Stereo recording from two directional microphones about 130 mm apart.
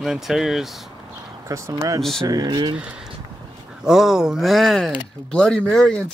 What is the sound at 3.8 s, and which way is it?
Speech, 5° right (ahead or behind).